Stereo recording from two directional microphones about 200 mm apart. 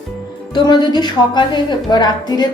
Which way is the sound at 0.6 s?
20° left (ahead or behind).